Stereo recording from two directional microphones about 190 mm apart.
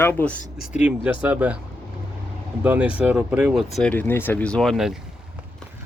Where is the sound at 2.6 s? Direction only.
5° right (ahead or behind).